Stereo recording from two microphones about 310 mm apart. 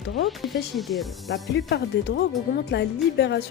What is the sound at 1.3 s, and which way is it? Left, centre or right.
A woman's voice, left.